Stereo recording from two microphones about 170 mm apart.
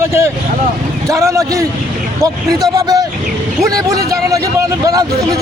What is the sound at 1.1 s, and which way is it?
A man's voice, 20° right (ahead or behind).